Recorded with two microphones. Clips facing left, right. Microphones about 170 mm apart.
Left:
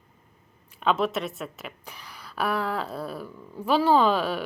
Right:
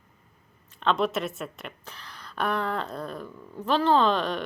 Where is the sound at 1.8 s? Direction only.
10° left (ahead or behind).